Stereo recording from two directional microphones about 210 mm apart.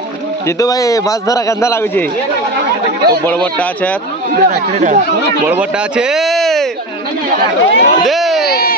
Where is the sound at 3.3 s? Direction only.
5° left (ahead or behind).